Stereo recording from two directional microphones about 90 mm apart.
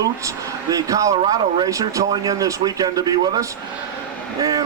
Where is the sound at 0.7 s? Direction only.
40° right (ahead or behind).